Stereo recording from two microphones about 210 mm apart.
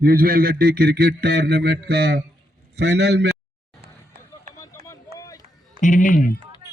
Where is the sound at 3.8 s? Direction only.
45° right (ahead or behind).